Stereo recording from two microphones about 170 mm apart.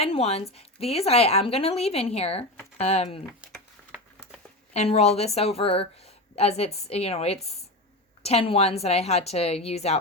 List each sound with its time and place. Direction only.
0.0 s speech: 35° left (ahead or behind)
3.4 s a sound: 5° right (ahead or behind)
4.7 s speech: 40° left (ahead or behind)